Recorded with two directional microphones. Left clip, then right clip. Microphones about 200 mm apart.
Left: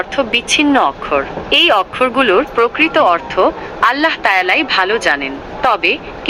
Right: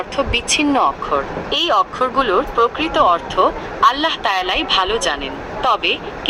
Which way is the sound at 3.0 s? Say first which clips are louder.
Even; 20° left (ahead or behind).